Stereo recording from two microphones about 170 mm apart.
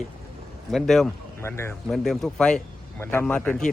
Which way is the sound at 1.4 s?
15° left (ahead or behind).